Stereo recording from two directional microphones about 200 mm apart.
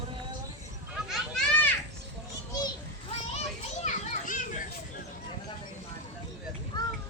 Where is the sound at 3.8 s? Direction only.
40° left (ahead or behind).